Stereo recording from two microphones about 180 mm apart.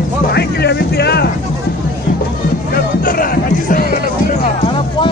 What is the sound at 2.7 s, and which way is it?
Music, 55° left (ahead or behind).